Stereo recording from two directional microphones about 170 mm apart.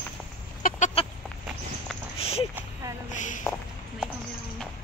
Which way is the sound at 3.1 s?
45° left (ahead or behind).